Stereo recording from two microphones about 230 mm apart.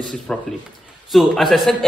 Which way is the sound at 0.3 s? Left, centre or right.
Centre.